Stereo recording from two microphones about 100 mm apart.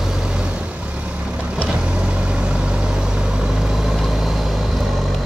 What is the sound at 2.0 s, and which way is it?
Vehicle, 10° right (ahead or behind).